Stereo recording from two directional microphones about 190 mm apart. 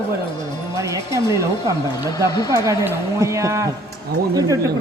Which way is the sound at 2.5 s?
15° right (ahead or behind).